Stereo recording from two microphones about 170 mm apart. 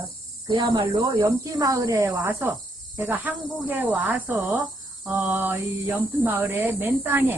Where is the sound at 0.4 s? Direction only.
25° right (ahead or behind).